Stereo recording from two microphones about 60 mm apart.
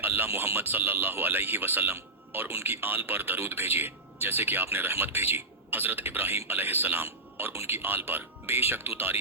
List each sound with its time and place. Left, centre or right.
0.0 s speech: right